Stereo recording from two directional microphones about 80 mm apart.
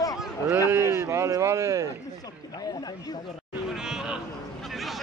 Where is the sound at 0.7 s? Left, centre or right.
Right.